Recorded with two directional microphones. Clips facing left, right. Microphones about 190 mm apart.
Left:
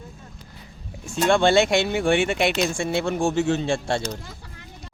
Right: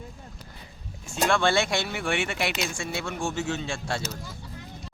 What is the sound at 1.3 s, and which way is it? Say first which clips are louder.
Speech: left 7 dB; 25° left (ahead or behind).